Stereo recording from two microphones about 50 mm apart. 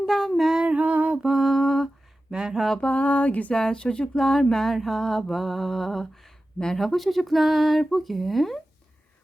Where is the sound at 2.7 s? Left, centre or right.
Left.